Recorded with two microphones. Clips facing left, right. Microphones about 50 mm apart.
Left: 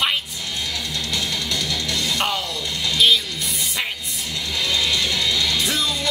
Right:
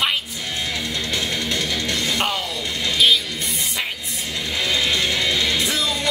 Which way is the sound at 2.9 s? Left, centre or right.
Centre.